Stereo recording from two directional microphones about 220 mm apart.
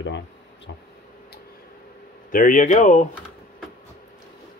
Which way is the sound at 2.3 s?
40° left (ahead or behind).